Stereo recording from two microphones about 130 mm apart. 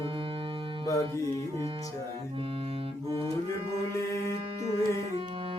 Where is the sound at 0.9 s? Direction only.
25° left (ahead or behind).